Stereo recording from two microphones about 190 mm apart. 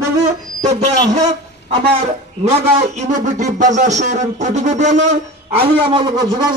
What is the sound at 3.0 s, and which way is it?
Speech, 40° right (ahead or behind).